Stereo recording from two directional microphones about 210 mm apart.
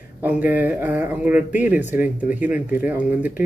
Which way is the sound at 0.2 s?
10° right (ahead or behind).